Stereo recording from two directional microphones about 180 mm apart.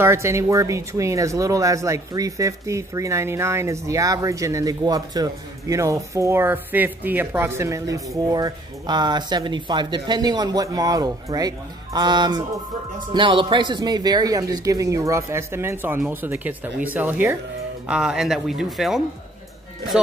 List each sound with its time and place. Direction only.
0.0 s speech: 15° right (ahead or behind)